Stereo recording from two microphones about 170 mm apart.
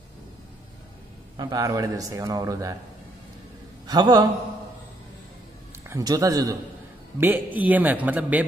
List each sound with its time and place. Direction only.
1.3 s a man's voice: 25° right (ahead or behind)
3.8 s a man's voice: 25° right (ahead or behind)
5.9 s a man's voice: 20° right (ahead or behind)